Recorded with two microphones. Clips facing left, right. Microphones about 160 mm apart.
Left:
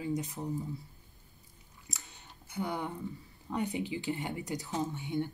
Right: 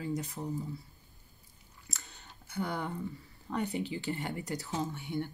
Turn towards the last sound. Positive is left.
turn(degrees=20)  # may be behind; listen again after turning